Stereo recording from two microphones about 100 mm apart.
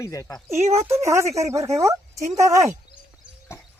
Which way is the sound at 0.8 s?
30° right (ahead or behind).